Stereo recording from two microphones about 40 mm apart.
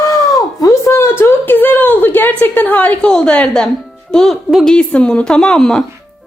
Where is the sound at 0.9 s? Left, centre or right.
Left.